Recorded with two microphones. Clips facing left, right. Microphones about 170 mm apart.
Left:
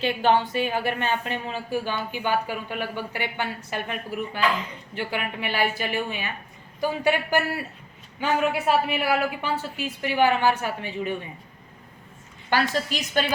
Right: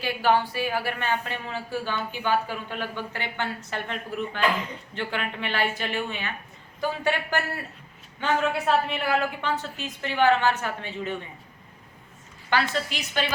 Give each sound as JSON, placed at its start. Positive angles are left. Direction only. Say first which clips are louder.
{"t": 0.0, "sound": "a woman's voice", "louder": "left 2 dB", "side_deg": 20}
{"t": 4.9, "sound": "a woman's voice", "louder": "left 1 dB", "side_deg": 10}
{"t": 12.5, "sound": "a woman's voice", "louder": "left 2 dB", "side_deg": 40}